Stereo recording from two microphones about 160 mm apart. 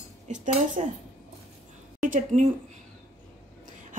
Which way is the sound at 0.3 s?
50° right (ahead or behind).